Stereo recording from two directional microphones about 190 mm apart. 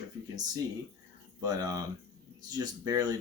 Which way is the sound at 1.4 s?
20° right (ahead or behind).